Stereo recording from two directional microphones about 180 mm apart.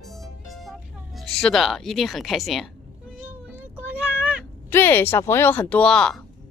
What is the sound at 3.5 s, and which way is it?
Child singing, 10° right (ahead or behind).